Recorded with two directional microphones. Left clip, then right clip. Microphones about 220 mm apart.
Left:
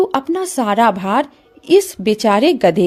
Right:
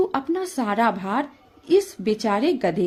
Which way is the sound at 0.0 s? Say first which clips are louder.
Left 6 dB; 35° left (ahead or behind).